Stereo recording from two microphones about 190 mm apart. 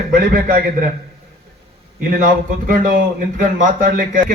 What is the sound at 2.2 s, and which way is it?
A man's voice, 45° right (ahead or behind).